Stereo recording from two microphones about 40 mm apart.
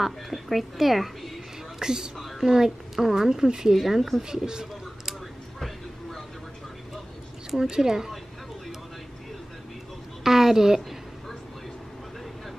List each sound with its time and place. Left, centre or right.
0.0 s a woman's voice: centre
1.8 s a woman's voice: centre
7.7 s a woman's voice: centre
10.2 s a sound: centre